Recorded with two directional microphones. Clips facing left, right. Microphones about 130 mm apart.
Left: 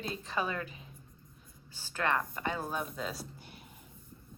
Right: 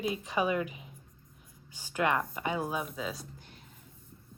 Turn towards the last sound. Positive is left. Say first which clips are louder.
# right 1 dB
turn(degrees=5)  # may be behind; listen again after turning